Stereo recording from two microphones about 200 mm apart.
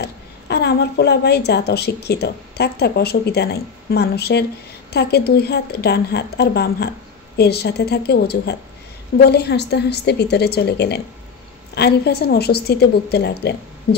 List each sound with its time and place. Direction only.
0.0 s a woman's voice: 55° left (ahead or behind)